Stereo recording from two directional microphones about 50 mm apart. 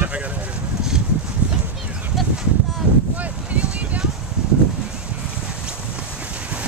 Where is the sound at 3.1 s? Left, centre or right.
Right.